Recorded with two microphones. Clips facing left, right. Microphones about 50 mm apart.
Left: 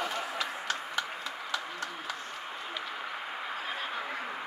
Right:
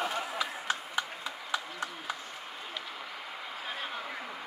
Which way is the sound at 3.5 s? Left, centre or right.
Centre.